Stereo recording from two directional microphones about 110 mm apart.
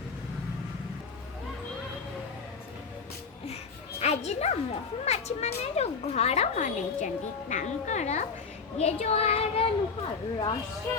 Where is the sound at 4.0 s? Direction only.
80° left.